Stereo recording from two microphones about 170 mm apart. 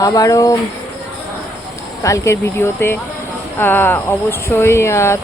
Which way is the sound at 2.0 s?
15° left (ahead or behind).